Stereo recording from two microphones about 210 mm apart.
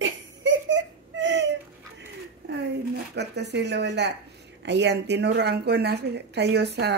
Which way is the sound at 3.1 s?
55° right (ahead or behind).